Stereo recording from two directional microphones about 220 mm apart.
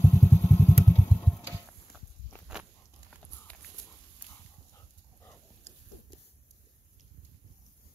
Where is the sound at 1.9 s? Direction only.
45° left (ahead or behind).